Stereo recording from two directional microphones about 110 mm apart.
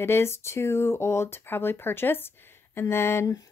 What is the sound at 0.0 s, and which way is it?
Speech, 25° left (ahead or behind).